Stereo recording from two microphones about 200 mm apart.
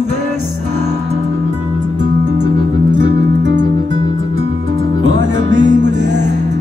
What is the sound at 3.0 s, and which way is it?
Music, 60° right (ahead or behind).